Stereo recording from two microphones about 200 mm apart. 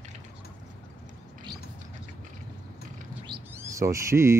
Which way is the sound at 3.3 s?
15° right (ahead or behind).